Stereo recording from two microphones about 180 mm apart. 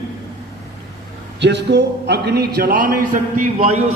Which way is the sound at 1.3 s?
75° right (ahead or behind).